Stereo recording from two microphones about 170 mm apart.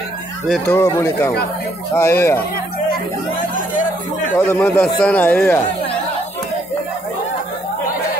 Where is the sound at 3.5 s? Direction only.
50° left (ahead or behind).